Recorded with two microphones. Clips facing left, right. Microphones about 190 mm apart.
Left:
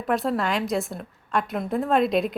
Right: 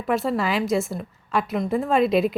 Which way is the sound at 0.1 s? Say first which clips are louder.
Right 1 dB; centre (ahead or behind).